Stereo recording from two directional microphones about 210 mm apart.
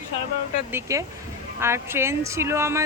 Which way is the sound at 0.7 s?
15° right (ahead or behind).